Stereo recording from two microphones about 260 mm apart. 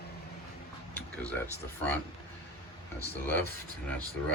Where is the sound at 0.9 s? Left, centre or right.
Centre.